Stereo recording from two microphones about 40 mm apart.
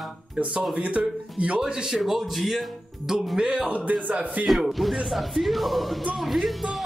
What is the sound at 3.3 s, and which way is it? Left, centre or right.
Speech, right.